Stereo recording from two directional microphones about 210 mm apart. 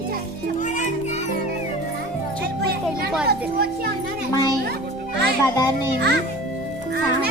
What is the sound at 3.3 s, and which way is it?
Speech, 45° right (ahead or behind).